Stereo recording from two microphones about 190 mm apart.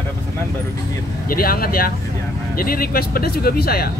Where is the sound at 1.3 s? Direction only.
50° left (ahead or behind).